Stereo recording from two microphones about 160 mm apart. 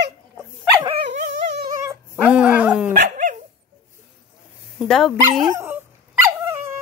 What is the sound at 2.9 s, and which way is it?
Dog, 55° right (ahead or behind).